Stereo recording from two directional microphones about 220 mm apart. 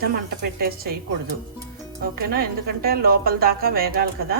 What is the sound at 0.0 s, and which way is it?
Speech, 45° right (ahead or behind).